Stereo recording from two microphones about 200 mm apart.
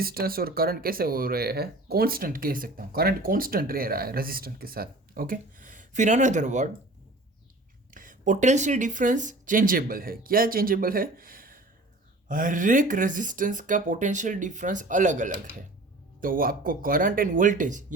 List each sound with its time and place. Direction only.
0.0 s speech: 50° right (ahead or behind)
7.9 s speech: 40° right (ahead or behind)